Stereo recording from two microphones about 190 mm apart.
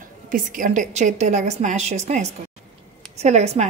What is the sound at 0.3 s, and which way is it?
A woman's voice, 45° right (ahead or behind).